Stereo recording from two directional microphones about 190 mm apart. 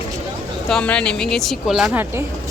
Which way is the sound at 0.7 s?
5° left (ahead or behind).